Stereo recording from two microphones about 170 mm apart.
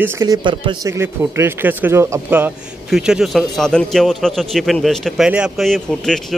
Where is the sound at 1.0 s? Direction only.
15° right (ahead or behind).